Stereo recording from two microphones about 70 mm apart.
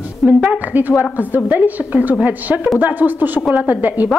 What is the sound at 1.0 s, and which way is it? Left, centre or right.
A woman's voice, right.